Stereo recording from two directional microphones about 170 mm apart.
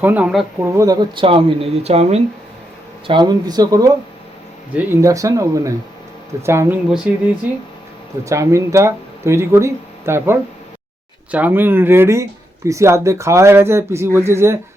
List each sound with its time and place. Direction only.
0.0 s speech: 10° right (ahead or behind)
0.6 s speech: 15° right (ahead or behind); by 2.2 s 40° right (ahead or behind)
3.1 s speech: 25° right (ahead or behind); by 7.2 s 10° right (ahead or behind)
8.2 s speech: 20° right (ahead or behind)